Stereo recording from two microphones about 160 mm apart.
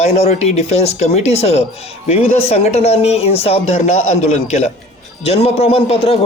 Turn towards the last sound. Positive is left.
turn(degrees=35)  # may be behind; listen again after turning